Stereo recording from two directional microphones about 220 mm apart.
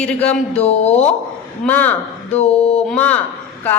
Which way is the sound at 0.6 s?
30° left (ahead or behind).